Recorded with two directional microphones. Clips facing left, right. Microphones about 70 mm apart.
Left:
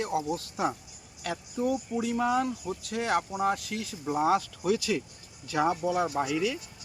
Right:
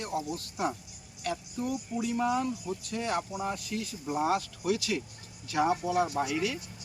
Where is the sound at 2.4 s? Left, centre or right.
Left.